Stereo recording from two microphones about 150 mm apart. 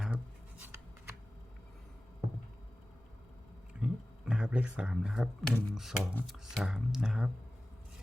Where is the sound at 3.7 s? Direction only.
5° right (ahead or behind).